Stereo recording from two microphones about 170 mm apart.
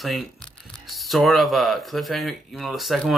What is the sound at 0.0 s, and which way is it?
Tearing, centre (ahead or behind).